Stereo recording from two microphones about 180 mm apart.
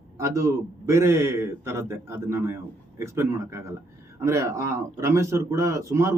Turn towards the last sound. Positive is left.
turn(degrees=-15)  # may be behind; listen again after turning